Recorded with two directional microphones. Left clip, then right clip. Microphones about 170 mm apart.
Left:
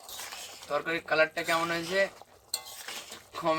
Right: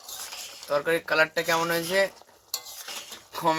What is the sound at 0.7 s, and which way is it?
Speech, 70° right (ahead or behind).